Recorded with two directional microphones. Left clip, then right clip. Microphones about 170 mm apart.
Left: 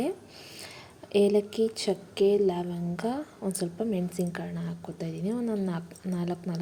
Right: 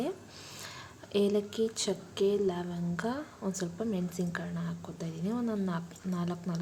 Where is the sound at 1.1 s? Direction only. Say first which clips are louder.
Left 6 dB; 15° left (ahead or behind).